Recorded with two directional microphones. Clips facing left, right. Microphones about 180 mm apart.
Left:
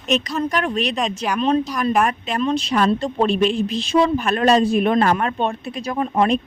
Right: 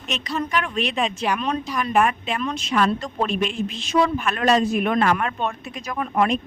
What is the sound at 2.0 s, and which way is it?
Speech, 40° left (ahead or behind).